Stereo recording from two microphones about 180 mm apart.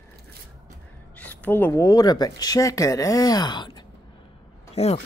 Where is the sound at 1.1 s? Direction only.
10° left (ahead or behind); by 3.8 s 25° left (ahead or behind).